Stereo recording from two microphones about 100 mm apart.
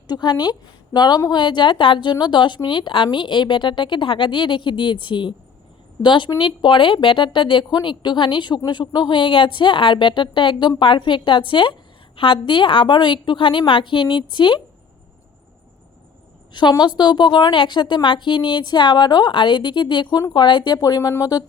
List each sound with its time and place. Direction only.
0.1 s speech: 50° left (ahead or behind)
16.5 s speech: 50° left (ahead or behind)
20.7 s speech: 35° left (ahead or behind)